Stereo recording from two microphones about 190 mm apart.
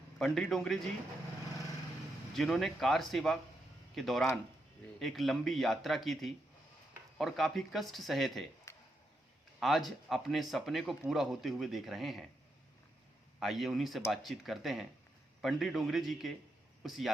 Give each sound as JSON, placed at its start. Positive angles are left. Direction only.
{"t": 0.2, "sound": "speech", "side_deg": 0}
{"t": 2.3, "sound": "speech", "side_deg": 0}
{"t": 8.7, "sound": "a sound", "side_deg": 15}
{"t": 9.6, "sound": "speech", "side_deg": 0}
{"t": 13.4, "sound": "speech", "side_deg": 0}